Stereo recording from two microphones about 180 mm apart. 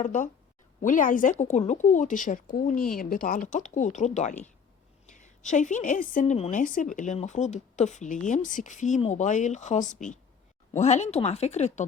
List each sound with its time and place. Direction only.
0.0 s a woman's voice: 45° left (ahead or behind)